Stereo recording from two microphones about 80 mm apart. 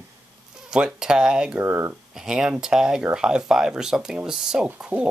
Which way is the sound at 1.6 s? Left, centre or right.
Right.